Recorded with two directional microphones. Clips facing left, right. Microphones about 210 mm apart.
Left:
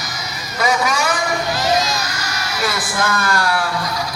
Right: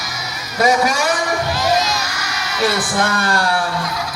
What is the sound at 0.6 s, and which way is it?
Speech, 40° right (ahead or behind).